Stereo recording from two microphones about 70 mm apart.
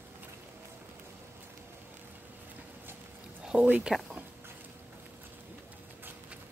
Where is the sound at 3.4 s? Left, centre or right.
Right.